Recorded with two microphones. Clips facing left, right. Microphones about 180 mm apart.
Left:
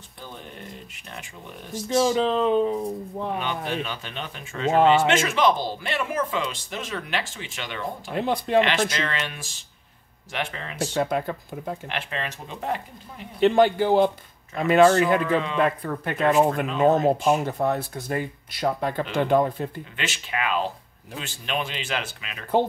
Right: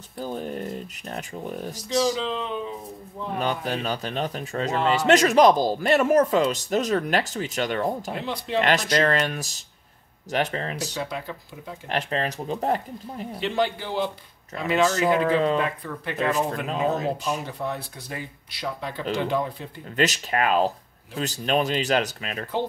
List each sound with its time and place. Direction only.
0.2 s speech: 40° right (ahead or behind)
2.1 s speech: 50° left (ahead or behind)
3.3 s speech: 40° right (ahead or behind)
8.1 s speech: 50° left (ahead or behind)
8.5 s speech: 40° right (ahead or behind)
11.0 s speech: 50° left (ahead or behind)
11.9 s speech: 40° right (ahead or behind)
13.4 s speech: 50° left (ahead or behind)
20.0 s speech: 40° right (ahead or behind)